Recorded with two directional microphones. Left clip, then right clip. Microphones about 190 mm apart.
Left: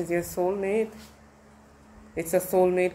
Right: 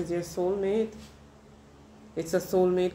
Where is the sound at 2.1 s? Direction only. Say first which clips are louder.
Left 3 dB; 30° left (ahead or behind).